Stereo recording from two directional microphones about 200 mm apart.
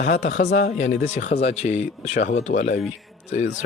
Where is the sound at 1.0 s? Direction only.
35° left (ahead or behind).